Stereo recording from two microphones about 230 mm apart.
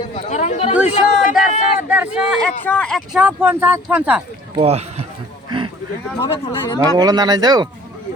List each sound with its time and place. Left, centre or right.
0.3 s speech: left
0.9 s a sound: left
1.9 s speech: centre
4.5 s speech: right
6.2 s speech: centre
6.7 s speech: centre